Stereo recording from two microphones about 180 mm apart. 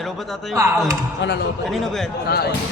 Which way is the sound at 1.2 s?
75° left (ahead or behind).